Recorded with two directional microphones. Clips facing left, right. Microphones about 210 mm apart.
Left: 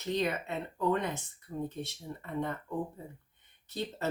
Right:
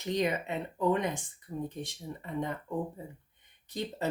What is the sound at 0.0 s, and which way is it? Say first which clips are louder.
Speech: right 2 dB; 15° right (ahead or behind).